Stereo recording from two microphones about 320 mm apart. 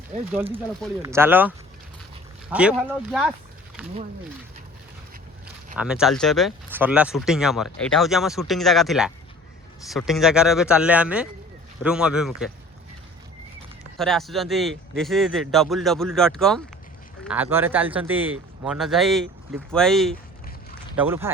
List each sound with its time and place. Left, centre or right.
0.1 s speech: right
0.5 s speech: centre
5.7 s speech: centre
14.0 s speech: centre